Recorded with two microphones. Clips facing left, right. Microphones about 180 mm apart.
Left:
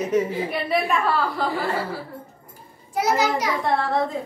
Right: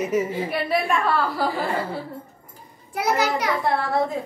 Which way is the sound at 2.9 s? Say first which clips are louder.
Left 1 dB; 60° right (ahead or behind).